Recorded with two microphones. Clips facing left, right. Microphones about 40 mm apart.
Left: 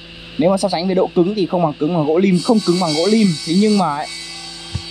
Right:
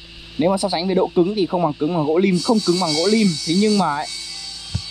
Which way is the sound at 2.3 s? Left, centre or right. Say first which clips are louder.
Left 3 dB; left.